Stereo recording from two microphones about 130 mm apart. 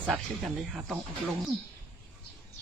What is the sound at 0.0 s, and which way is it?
Speech, centre (ahead or behind).